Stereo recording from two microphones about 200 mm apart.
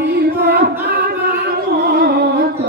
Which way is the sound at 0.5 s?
55° right (ahead or behind).